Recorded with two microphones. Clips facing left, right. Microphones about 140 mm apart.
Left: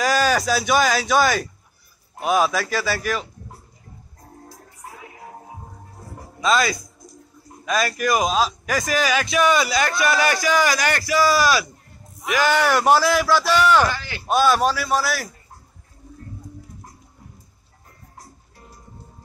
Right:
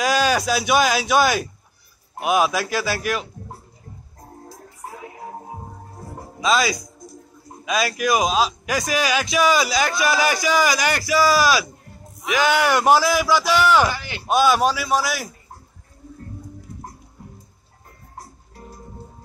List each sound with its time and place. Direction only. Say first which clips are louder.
0.0 s a man's voice: even; centre (ahead or behind)
2.5 s a man's voice: even; centre (ahead or behind)
6.4 s a man's voice: even; 5° right (ahead or behind)
13.9 s a man's voice: right 1 dB; 15° right (ahead or behind)
14.3 s a man's voice: right 1 dB; centre (ahead or behind)